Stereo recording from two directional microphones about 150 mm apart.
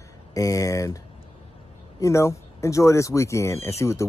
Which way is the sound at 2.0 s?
20° left (ahead or behind).